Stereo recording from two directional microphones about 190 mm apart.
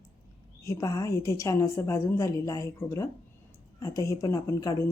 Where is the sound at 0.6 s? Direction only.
15° left (ahead or behind).